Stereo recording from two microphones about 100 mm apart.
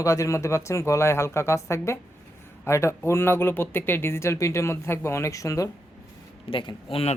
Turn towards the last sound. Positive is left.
turn(degrees=60)  # may be behind; listen again after turning